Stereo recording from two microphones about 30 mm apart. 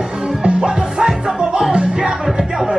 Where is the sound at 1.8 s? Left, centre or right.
Right.